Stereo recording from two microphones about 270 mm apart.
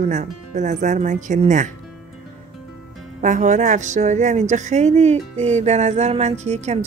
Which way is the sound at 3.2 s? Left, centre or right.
Right.